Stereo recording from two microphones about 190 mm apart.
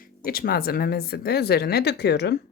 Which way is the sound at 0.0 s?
50° left (ahead or behind).